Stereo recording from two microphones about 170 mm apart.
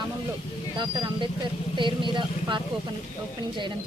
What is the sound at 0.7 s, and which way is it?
Speech, 25° right (ahead or behind).